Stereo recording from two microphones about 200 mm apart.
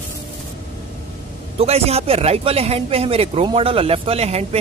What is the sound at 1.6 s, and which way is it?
Speech, 30° right (ahead or behind).